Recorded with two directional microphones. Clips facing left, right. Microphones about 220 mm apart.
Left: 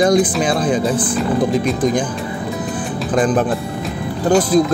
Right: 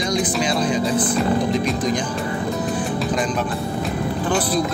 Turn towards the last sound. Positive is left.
turn(degrees=45)  # may be behind; listen again after turning